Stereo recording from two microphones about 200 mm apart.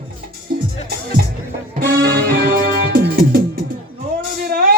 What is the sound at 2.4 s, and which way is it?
Music, 45° right (ahead or behind).